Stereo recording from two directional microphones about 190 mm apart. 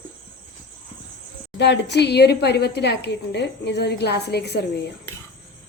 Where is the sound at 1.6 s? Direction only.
65° left (ahead or behind).